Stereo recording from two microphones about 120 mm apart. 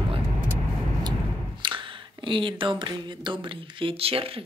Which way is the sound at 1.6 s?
45° right (ahead or behind).